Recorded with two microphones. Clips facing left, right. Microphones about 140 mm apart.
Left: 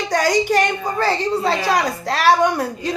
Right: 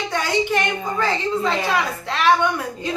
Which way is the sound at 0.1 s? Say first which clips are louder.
Left 5 dB; 40° left (ahead or behind).